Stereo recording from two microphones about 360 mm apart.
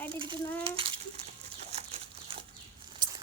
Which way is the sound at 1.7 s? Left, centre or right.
Centre.